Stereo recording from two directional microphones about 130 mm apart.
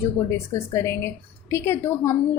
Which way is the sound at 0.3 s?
20° left (ahead or behind).